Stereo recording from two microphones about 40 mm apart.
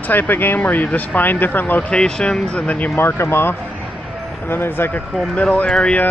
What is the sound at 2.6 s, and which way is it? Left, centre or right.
Speech, left.